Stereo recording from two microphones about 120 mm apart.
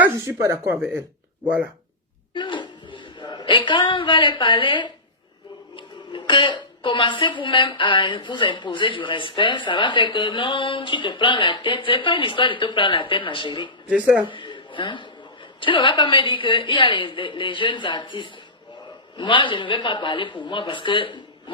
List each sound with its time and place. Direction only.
0.0 s speech: 20° right (ahead or behind)
2.3 s a woman's voice: 40° left (ahead or behind)
13.9 s speech: 10° right (ahead or behind)
14.3 s a sound: 45° left (ahead or behind)
15.6 s a woman's voice: 45° left (ahead or behind)